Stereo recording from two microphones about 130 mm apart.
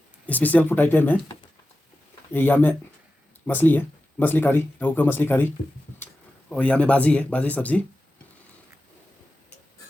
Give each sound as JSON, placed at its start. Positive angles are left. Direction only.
{"t": 0.3, "sound": "speech", "side_deg": 10}
{"t": 2.3, "sound": "speech", "side_deg": 15}
{"t": 6.5, "sound": "speech", "side_deg": 10}